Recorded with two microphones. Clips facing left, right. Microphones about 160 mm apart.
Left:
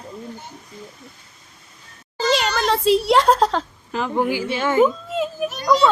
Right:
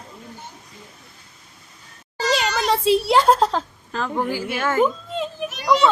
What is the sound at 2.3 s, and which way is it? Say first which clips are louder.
A child's voice: even; centre (ahead or behind).